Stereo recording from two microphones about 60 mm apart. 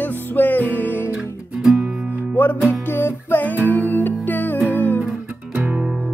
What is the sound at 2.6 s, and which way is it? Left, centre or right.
Music, left.